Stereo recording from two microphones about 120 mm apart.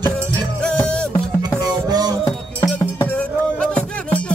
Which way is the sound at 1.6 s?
35° right (ahead or behind).